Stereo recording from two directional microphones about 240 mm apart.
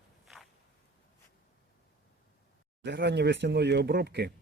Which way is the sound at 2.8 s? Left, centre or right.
Right.